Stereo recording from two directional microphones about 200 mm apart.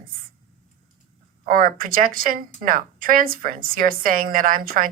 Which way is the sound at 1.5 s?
45° right (ahead or behind).